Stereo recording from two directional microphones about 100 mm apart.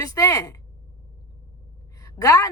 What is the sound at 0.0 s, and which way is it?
Speech, 35° left (ahead or behind).